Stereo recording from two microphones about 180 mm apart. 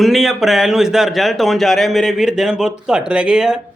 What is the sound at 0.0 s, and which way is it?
A man's voice, centre (ahead or behind).